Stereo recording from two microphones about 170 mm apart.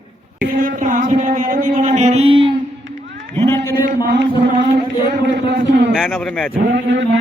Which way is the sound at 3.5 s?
15° left (ahead or behind).